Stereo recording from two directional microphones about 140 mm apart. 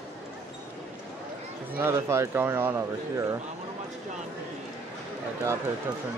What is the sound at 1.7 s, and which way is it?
Speech, 20° right (ahead or behind).